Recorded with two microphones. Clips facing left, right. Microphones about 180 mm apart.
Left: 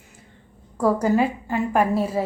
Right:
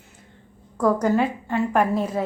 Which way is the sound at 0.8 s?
10° left (ahead or behind).